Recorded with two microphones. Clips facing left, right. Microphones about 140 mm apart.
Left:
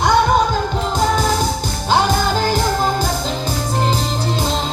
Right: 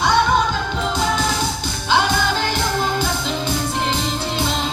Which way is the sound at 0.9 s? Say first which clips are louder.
Left 5 dB; 40° left (ahead or behind).